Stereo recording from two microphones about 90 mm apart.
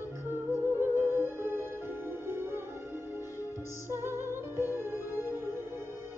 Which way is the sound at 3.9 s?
25° right (ahead or behind).